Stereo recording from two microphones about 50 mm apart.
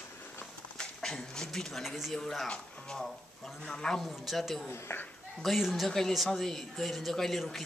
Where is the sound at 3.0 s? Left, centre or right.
Centre.